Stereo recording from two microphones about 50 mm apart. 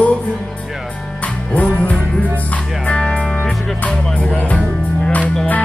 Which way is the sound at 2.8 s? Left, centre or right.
Left.